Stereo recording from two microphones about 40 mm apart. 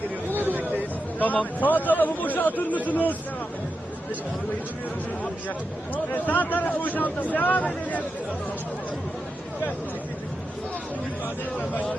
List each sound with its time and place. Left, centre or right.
0.3 s a sound: right
1.2 s speech: left
5.9 s speech: left